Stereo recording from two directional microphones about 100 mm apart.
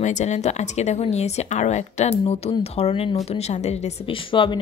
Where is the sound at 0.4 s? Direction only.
90° left.